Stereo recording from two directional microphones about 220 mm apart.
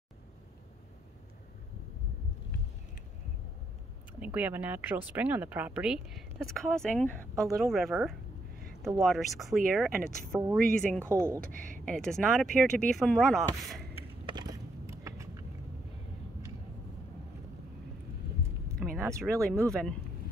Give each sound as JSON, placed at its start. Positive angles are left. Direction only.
{"t": 4.2, "sound": "speech", "side_deg": -5}
{"t": 11.1, "sound": "speech", "side_deg": -15}
{"t": 11.5, "sound": "speech", "side_deg": -35}
{"t": 11.8, "sound": "speech", "side_deg": 5}
{"t": 14.2, "sound": "a sound", "side_deg": -20}
{"t": 18.9, "sound": "speech", "side_deg": -10}
{"t": 19.7, "sound": "speech", "side_deg": 5}